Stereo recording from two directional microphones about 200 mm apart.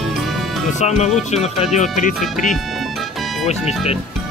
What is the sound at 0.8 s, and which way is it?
Speech, 35° left (ahead or behind).